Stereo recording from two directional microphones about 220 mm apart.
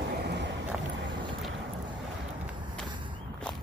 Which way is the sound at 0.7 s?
5° right (ahead or behind).